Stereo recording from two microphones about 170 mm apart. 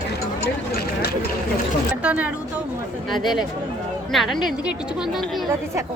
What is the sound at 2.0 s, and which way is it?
Speech, 5° right (ahead or behind).